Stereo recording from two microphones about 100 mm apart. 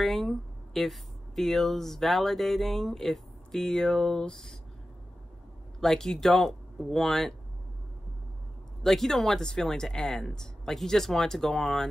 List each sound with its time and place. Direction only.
0.0 s speech: centre (ahead or behind)
5.8 s speech: 5° left (ahead or behind)
8.8 s speech: 5° left (ahead or behind)